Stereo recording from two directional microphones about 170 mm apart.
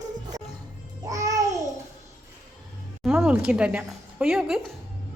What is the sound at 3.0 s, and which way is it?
Speech, 5° right (ahead or behind).